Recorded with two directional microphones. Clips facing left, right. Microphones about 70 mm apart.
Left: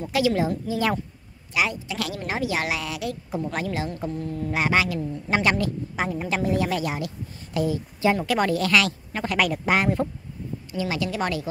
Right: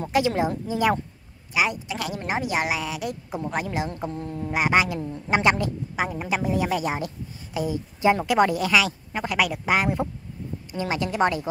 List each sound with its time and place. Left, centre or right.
0.1 s a woman's voice: right
4.5 s a woman's voice: centre
5.9 s a woman's voice: centre
10.8 s a woman's voice: right